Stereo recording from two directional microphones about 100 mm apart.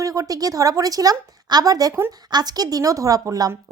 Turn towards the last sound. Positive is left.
turn(degrees=-35)  # may be behind; listen again after turning